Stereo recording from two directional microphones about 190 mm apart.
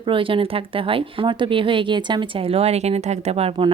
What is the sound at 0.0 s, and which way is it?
A woman's voice, 25° right (ahead or behind).